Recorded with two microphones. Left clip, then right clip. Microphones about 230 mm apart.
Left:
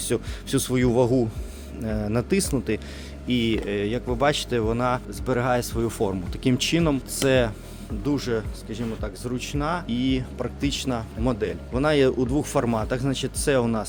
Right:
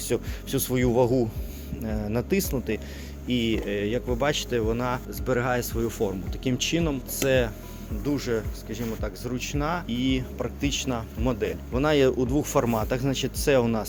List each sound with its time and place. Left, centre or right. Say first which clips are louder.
0.0 s speech: left 1 dB; left